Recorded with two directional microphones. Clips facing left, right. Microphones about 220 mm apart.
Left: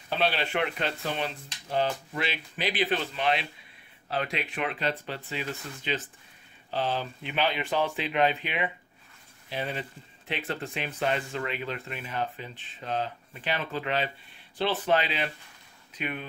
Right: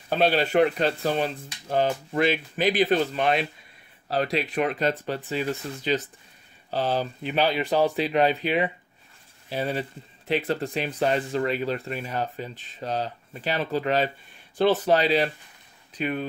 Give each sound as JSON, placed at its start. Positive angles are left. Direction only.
{"t": 0.1, "sound": "speech", "side_deg": -45}